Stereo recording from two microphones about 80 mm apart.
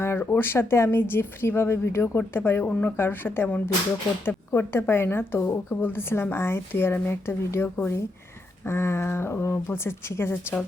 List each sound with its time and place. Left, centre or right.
0.0 s a woman's voice: left